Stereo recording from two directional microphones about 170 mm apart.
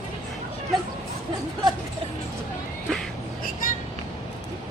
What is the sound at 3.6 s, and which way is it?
Vehicle, 55° left (ahead or behind).